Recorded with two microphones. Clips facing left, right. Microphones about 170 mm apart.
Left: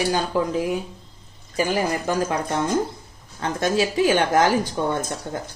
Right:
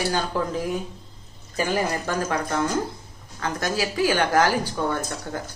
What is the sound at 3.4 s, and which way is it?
A woman's voice, 25° left (ahead or behind).